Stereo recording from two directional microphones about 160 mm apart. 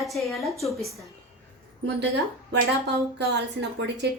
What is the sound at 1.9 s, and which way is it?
A woman's voice, 90° right.